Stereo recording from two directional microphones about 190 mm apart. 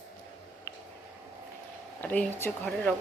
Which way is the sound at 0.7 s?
15° left (ahead or behind).